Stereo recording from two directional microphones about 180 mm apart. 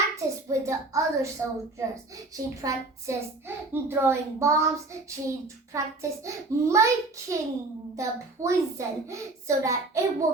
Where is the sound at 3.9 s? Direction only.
15° right (ahead or behind).